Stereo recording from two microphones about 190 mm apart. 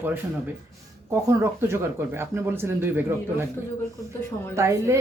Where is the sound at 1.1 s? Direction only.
15° right (ahead or behind).